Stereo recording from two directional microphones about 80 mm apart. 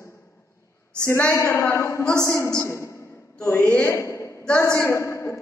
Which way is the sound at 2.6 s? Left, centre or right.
Left.